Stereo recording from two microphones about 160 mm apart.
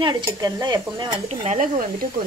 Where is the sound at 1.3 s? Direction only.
40° right (ahead or behind).